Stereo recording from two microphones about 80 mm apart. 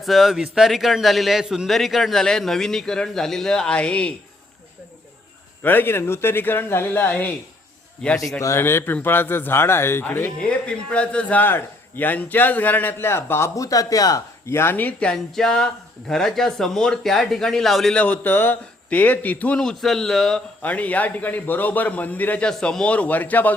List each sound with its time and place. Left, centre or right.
0.0 s a man's voice: centre
5.6 s a man's voice: left
8.0 s a man's voice: centre
8.4 s speech: left
10.7 s a man's voice: centre; by 13.5 s left
13.6 s speech: left
14.4 s speech: left; by 18.0 s centre
18.0 s a man's voice: left
19.6 s speech: centre
20.6 s a man's voice: centre